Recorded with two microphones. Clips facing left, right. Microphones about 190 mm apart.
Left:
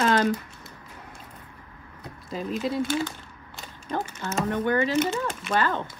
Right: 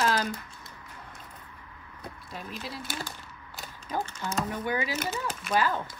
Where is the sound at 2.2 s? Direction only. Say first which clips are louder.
Left 12 dB; centre (ahead or behind).